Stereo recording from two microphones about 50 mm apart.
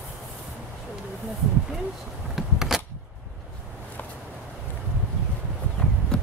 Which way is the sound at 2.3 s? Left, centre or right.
Centre.